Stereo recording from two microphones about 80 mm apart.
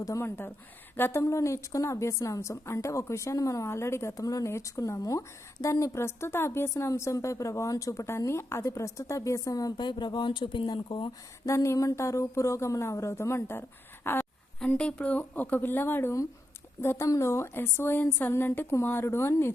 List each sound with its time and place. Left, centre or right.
0.2 s speech: left
1.2 s a woman's voice: left
9.7 s speech: left
11.4 s a woman's voice: left
14.7 s a woman's voice: centre; by 19.5 s left